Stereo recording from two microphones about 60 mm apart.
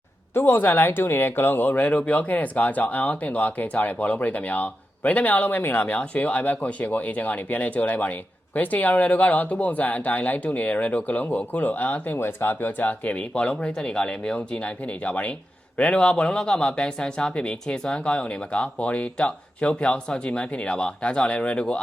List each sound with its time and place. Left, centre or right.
0.3 s speech: left
12.1 s speech: left; by 21.8 s centre